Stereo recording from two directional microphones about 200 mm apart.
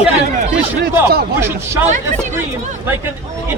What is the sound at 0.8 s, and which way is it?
Speech, 50° right (ahead or behind).